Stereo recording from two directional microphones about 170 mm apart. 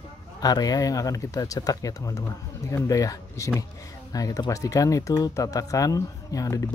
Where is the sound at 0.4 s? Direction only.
20° left (ahead or behind).